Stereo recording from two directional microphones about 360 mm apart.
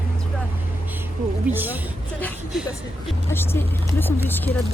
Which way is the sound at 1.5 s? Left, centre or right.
Centre.